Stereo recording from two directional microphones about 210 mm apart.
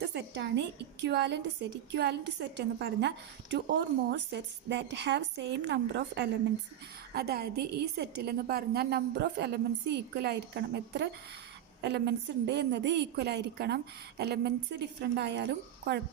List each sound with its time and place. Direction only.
0.0 s a woman's voice: 55° right (ahead or behind)